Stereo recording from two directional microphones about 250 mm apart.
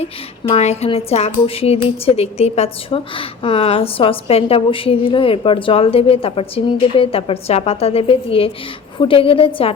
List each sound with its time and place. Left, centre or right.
0.0 s a woman's voice: left